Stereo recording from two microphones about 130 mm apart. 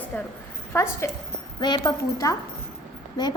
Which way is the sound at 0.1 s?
10° left (ahead or behind).